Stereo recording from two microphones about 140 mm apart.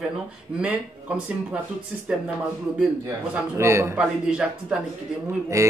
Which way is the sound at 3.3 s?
20° right (ahead or behind).